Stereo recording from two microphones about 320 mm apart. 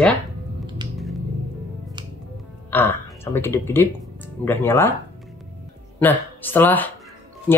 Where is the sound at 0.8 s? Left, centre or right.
Centre.